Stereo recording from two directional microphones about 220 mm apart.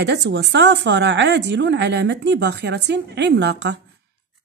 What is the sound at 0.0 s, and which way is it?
A woman's voice, 55° right (ahead or behind).